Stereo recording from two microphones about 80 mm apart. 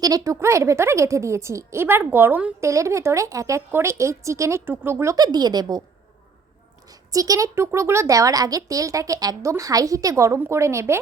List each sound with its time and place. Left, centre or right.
0.0 s speech: right
0.3 s a woman's voice: right
2.6 s a woman's voice: right
5.1 s speech: right
7.1 s a woman's voice: right